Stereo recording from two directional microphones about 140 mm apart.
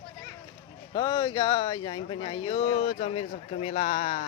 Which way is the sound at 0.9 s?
35° left (ahead or behind).